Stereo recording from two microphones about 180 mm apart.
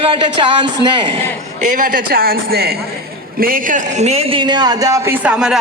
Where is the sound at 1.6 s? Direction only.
45° right (ahead or behind).